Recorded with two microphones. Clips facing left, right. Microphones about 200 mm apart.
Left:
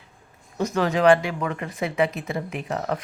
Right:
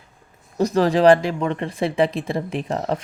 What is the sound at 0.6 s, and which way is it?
A woman's voice, 35° right (ahead or behind).